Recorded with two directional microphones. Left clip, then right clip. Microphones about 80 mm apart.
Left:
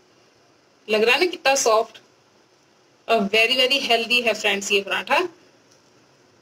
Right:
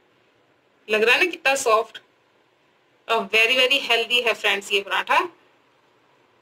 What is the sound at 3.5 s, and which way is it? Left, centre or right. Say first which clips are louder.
Speech: even; right.